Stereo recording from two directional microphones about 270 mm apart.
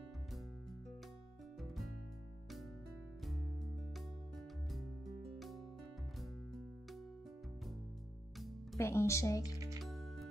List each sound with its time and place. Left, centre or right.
8.7 s speech: centre
9.8 s music: centre